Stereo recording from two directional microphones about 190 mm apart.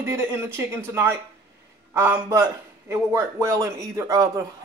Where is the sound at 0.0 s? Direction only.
15° right (ahead or behind).